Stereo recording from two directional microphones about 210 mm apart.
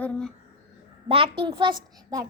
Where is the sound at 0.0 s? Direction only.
5° left (ahead or behind).